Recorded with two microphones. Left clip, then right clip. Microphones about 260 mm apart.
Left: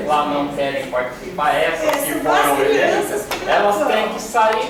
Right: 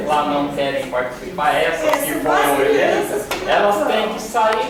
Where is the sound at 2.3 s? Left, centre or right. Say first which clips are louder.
Even; centre.